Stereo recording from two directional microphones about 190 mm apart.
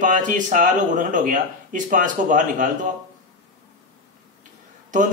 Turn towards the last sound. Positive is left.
turn(degrees=-40)  # may be behind; listen again after turning